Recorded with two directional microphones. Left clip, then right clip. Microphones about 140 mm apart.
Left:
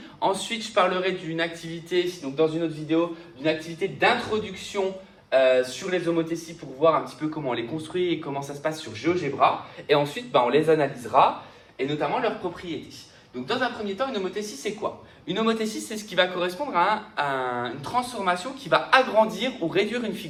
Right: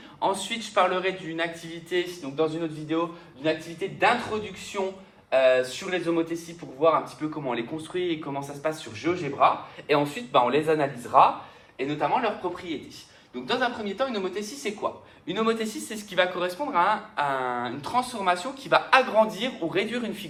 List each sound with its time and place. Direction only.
0.2 s a man's voice: 25° right (ahead or behind)
5.3 s speech: 45° right (ahead or behind)
14.0 s speech: 45° right (ahead or behind)